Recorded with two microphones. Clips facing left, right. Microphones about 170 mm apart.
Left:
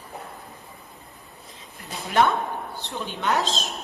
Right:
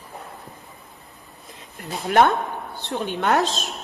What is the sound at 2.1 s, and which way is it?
A woman's voice, 65° right (ahead or behind).